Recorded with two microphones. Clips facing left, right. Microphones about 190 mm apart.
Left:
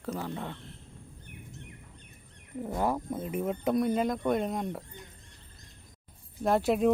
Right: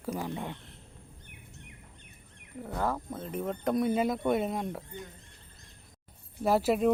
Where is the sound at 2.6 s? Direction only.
15° left (ahead or behind); by 5.0 s centre (ahead or behind).